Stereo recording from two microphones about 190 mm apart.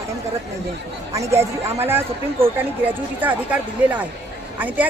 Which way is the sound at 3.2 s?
10° right (ahead or behind).